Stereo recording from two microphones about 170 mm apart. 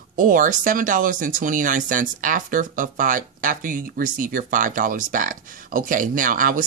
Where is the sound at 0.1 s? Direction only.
50° right (ahead or behind).